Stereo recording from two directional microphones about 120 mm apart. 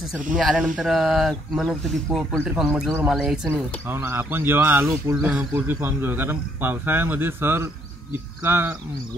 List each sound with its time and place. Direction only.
0.4 s speech: centre (ahead or behind)
3.5 s speech: 15° right (ahead or behind)